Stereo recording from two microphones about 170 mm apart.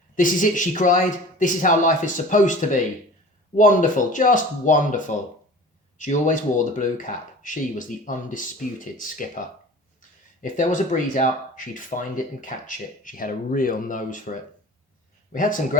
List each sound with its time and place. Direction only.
0.2 s speech: 50° left (ahead or behind)
10.4 s speech: 50° left (ahead or behind)